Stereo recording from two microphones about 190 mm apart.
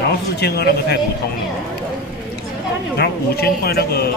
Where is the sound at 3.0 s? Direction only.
55° left (ahead or behind).